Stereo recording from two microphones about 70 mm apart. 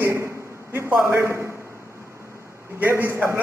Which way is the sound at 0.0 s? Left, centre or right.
Right.